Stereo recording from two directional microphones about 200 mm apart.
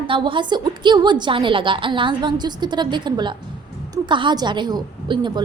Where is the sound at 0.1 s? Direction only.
25° right (ahead or behind).